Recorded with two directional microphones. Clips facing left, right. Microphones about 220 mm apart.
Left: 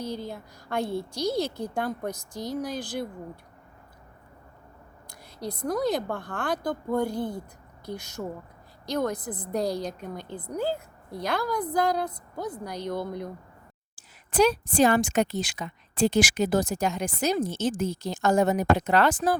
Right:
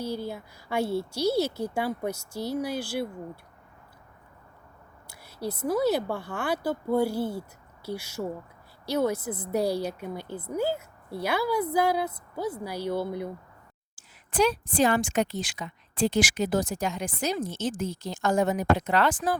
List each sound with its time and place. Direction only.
0.0 s a woman's voice: 10° right (ahead or behind)
5.0 s a woman's voice: 5° right (ahead or behind)
13.9 s a woman's voice: 40° left (ahead or behind)